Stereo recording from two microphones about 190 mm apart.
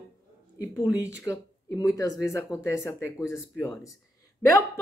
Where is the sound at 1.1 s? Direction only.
15° left (ahead or behind).